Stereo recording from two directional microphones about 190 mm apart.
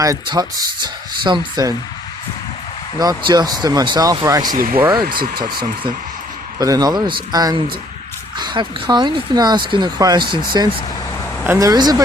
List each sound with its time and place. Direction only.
0.0 s speech: 20° right (ahead or behind)
3.0 s speech: 20° right (ahead or behind)
4.5 s speech: 50° right (ahead or behind)
5.3 s speech: 25° right (ahead or behind)